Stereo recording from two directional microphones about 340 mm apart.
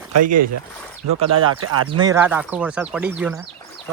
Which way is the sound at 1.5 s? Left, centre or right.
Right.